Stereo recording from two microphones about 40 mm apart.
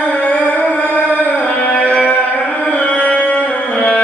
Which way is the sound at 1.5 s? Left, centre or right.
Left.